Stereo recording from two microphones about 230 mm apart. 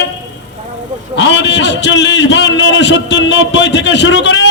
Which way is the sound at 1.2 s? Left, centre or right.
Left.